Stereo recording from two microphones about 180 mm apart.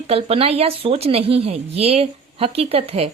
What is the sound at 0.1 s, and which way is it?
Speech, 30° right (ahead or behind).